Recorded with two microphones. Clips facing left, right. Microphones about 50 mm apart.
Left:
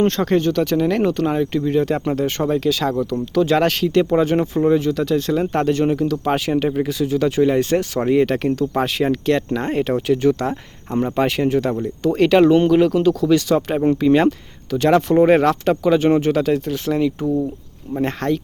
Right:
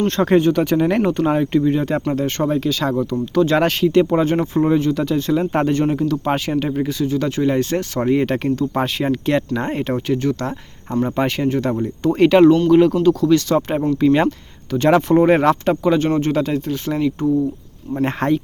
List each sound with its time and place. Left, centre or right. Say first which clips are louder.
0.3 s speech: right 2 dB; centre
18.2 s speech: right 3 dB; centre